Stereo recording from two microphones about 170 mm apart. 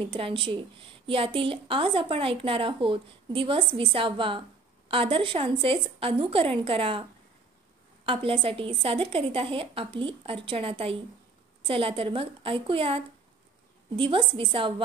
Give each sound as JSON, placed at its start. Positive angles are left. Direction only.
{"t": 0.1, "sound": "a woman's voice", "side_deg": -30}